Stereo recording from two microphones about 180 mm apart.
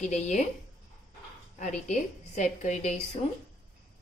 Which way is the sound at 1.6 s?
40° left (ahead or behind).